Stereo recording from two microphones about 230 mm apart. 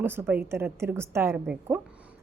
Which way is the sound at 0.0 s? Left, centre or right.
Centre.